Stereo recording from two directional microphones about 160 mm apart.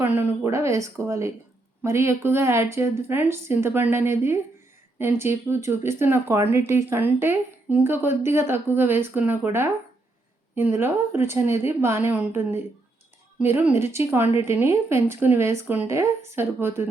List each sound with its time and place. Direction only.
0.0 s speech: 15° right (ahead or behind)